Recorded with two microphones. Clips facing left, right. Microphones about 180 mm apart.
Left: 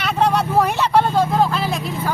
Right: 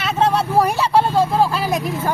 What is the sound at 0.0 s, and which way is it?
Vehicle, 5° right (ahead or behind).